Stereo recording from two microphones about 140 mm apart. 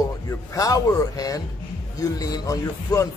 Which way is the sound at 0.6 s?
25° left (ahead or behind).